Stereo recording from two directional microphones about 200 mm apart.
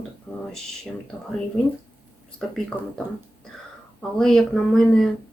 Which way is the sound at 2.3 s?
Centre (ahead or behind).